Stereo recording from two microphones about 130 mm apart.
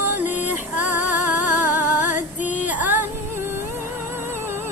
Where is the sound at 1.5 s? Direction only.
15° right (ahead or behind).